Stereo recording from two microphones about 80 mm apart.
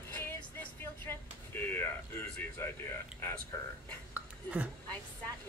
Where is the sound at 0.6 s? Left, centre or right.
Left.